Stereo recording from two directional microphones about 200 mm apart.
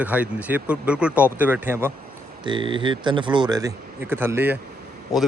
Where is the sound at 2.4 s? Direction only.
25° right (ahead or behind).